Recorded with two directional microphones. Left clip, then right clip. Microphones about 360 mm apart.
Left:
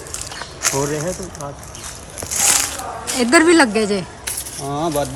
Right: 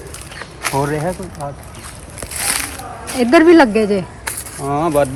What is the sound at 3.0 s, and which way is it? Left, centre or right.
Speech, centre.